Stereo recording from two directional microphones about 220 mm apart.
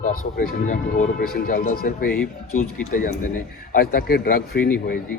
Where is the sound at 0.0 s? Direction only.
40° left (ahead or behind).